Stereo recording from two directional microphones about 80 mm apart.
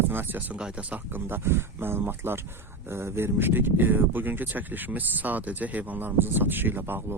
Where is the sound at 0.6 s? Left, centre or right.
Centre.